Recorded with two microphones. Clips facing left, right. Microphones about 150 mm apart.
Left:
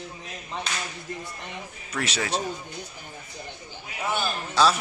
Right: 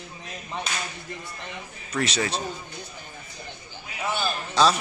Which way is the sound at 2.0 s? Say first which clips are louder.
Even; 10° left (ahead or behind).